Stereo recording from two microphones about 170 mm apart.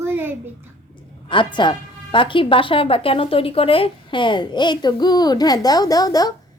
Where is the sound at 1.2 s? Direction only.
30° left (ahead or behind).